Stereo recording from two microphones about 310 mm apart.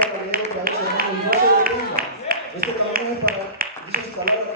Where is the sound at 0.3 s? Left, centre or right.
Right.